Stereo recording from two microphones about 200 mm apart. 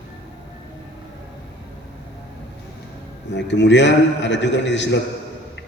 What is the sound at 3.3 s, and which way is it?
A man's voice, 60° left (ahead or behind).